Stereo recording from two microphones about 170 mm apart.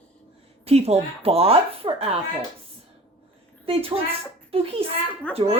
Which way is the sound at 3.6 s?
35° right (ahead or behind).